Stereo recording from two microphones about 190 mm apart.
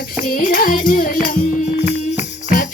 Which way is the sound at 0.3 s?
50° left (ahead or behind).